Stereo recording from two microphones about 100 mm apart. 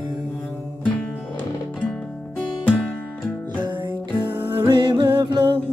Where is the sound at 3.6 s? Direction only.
50° right (ahead or behind).